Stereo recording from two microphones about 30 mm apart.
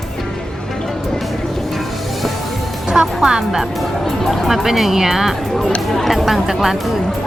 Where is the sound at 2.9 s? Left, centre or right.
Right.